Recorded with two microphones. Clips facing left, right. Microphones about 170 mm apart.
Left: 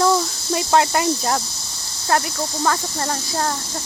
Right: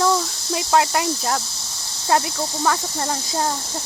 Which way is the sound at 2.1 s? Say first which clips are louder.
Right 1 dB; 20° right (ahead or behind).